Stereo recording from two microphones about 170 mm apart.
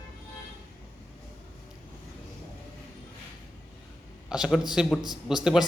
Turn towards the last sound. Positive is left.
turn(degrees=-5)  # may be behind; listen again after turning